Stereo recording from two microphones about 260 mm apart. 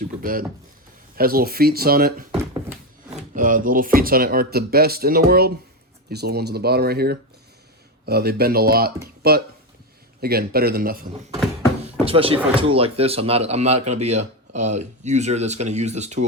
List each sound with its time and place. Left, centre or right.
0.0 s speech: right
11.8 s speech: right